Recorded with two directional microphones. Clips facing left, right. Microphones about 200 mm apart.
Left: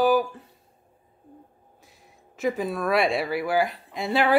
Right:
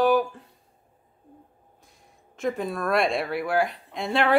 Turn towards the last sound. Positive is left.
turn(degrees=0)  # may be behind; listen again after turning